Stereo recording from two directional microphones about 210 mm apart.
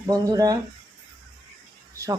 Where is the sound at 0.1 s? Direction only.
15° right (ahead or behind).